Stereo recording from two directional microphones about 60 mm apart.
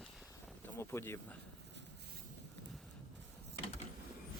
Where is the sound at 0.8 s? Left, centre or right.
Left.